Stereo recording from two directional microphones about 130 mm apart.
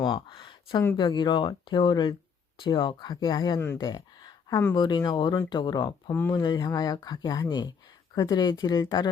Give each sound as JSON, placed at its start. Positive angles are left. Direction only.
{"t": 0.0, "sound": "speech", "side_deg": 40}
{"t": 6.1, "sound": "speech", "side_deg": 20}
{"t": 6.4, "sound": "speech", "side_deg": 30}